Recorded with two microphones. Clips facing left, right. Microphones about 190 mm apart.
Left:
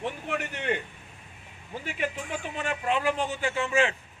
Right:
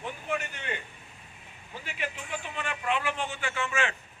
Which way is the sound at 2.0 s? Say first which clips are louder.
Left 4 dB; 45° left (ahead or behind).